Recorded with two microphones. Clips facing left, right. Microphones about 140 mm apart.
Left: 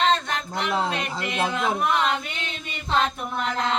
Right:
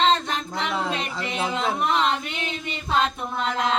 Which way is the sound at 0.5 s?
25° left (ahead or behind).